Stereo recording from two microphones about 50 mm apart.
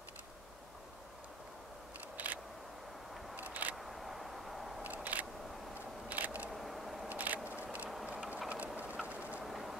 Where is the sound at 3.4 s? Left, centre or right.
Right.